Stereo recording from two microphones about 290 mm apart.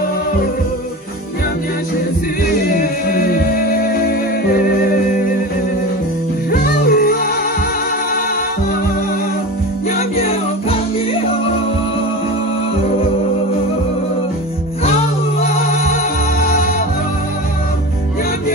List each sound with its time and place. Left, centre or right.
2.8 s music: left
6.5 s music: left
15.4 s music: left